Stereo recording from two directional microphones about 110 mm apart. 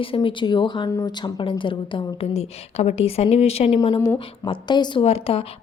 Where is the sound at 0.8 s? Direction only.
35° left (ahead or behind); by 4.0 s 65° left (ahead or behind).